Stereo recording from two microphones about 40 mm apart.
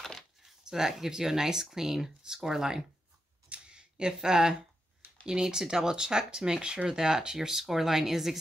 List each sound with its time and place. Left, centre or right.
0.4 s speech: centre
3.4 s camera: right
3.7 s speech: centre